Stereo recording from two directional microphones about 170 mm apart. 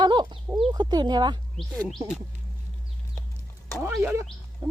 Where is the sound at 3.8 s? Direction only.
15° right (ahead or behind).